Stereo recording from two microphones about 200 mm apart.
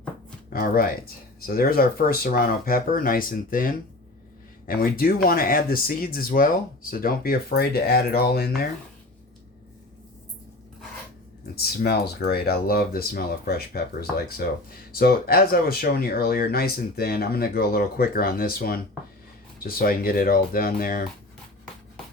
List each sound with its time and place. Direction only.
0.5 s speech: 45° left (ahead or behind)
11.5 s speech: 50° left (ahead or behind)